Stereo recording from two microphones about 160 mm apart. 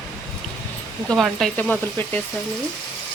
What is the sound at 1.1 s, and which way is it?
A woman's voice, centre (ahead or behind).